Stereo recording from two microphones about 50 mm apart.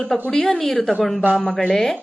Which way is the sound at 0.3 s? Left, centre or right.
Centre.